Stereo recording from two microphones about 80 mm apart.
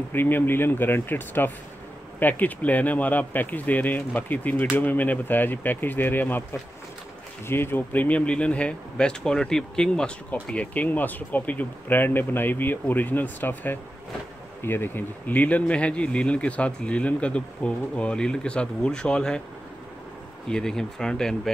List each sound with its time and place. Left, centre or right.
0.1 s speech: left
7.4 s speech: left; by 19.4 s centre
20.4 s speech: centre